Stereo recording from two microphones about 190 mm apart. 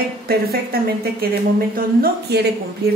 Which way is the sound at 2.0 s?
60° right (ahead or behind).